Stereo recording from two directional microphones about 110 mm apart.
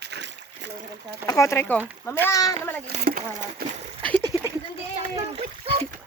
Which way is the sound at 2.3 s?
30° left (ahead or behind).